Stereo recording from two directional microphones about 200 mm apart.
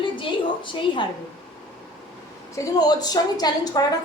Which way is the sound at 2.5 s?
20° left (ahead or behind).